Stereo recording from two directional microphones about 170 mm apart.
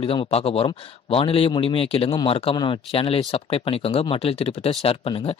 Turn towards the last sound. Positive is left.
turn(degrees=35)  # may be behind; listen again after turning